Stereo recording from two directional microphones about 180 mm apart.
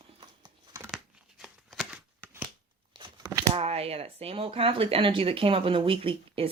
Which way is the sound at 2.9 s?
25° right (ahead or behind).